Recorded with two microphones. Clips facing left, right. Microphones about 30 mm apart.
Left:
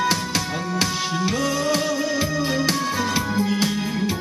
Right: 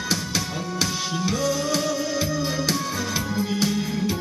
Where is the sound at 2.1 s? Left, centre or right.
Centre.